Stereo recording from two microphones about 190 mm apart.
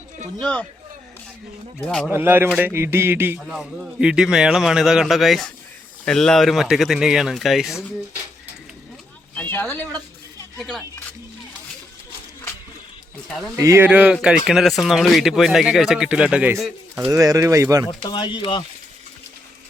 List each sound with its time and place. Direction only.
0.3 s a man's voice: 5° left (ahead or behind)
2.0 s a man's voice: 10° right (ahead or behind)
9.3 s a sound: 10° left (ahead or behind)
13.2 s a man's voice: centre (ahead or behind)
13.6 s a man's voice: 15° right (ahead or behind)
17.1 s speech: 20° right (ahead or behind)
18.0 s speech: 25° left (ahead or behind)